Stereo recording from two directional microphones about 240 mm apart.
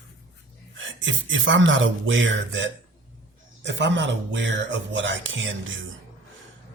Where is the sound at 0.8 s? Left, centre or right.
Right.